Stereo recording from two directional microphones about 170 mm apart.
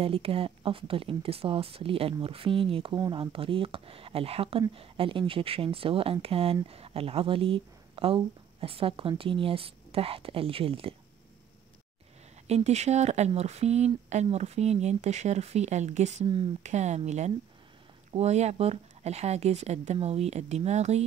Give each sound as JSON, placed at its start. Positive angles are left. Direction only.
{"t": 0.0, "sound": "speech", "side_deg": -35}
{"t": 12.4, "sound": "speech", "side_deg": -40}